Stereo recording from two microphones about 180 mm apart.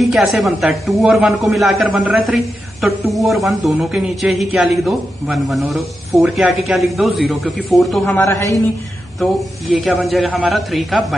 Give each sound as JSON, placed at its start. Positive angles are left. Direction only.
{"t": 0.0, "sound": "a man's voice", "side_deg": 0}
{"t": 8.2, "sound": "a man's voice", "side_deg": 15}
{"t": 9.2, "sound": "a man's voice", "side_deg": 0}